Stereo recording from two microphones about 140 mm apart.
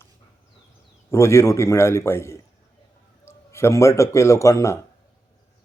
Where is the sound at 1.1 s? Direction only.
20° left (ahead or behind).